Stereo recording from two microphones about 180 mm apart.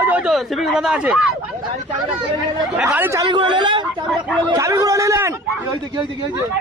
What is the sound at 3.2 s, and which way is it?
Speech, 25° right (ahead or behind).